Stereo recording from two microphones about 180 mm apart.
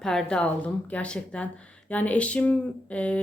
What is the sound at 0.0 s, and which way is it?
A woman's voice, 5° left (ahead or behind).